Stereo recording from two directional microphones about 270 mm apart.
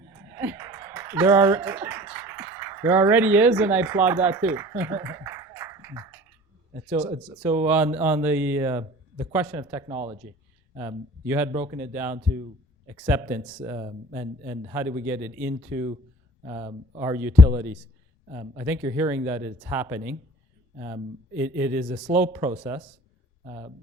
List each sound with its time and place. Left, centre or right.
0.3 s a sound: centre
6.8 s a man's voice: centre
9.9 s speech: right
10.8 s a man's voice: centre
13.7 s a man's voice: centre
16.5 s a man's voice: centre
23.5 s speech: centre